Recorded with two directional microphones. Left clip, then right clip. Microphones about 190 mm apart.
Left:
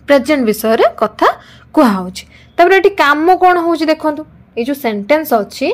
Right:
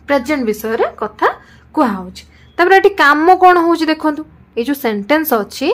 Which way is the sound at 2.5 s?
15° left (ahead or behind).